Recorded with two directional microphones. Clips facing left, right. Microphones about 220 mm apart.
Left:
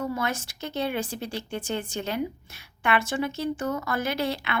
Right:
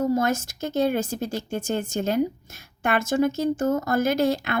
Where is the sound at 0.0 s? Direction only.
45° right (ahead or behind).